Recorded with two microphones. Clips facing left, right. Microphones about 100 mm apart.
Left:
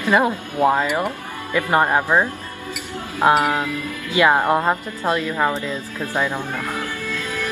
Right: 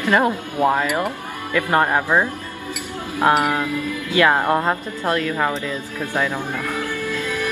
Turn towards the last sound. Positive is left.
turn(degrees=15)  # may be behind; listen again after turning